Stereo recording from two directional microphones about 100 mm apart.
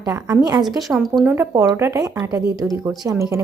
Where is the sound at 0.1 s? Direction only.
35° right (ahead or behind).